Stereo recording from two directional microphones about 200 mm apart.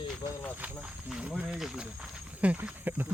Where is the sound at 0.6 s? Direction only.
5° right (ahead or behind).